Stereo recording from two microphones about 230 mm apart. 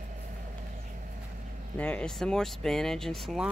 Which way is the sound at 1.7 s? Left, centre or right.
Centre.